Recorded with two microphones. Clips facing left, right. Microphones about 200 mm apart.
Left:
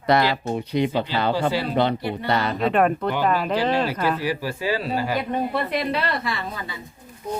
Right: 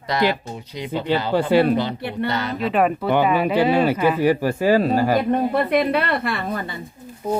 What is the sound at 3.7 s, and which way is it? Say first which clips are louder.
Speech: right 5 dB; 55° right (ahead or behind).